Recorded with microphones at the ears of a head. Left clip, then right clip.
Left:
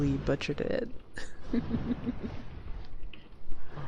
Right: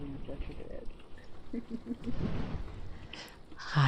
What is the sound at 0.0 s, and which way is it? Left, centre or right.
Speech, left.